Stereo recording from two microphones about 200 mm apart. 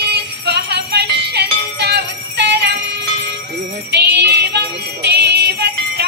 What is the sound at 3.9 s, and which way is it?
Music, 55° right (ahead or behind).